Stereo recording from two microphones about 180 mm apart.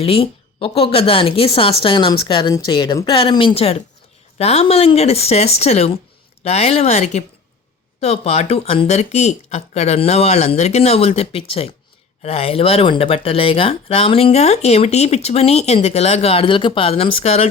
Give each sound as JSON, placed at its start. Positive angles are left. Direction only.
{"t": 0.0, "sound": "speech", "side_deg": 35}